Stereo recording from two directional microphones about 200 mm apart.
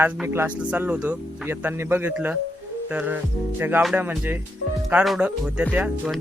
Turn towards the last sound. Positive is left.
turn(degrees=-5)  # may be behind; listen again after turning